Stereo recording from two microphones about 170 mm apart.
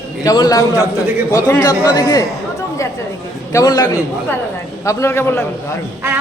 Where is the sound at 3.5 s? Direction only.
20° left (ahead or behind).